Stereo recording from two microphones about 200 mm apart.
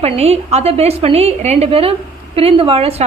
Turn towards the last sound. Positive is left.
turn(degrees=-30)  # may be behind; listen again after turning